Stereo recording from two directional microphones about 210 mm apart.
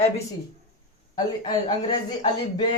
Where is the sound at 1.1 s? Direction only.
20° left (ahead or behind).